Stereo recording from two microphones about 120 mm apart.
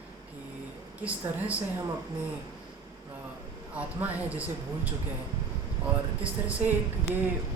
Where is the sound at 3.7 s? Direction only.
10° right (ahead or behind).